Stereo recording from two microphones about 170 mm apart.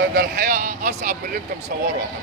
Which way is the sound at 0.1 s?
55° right (ahead or behind).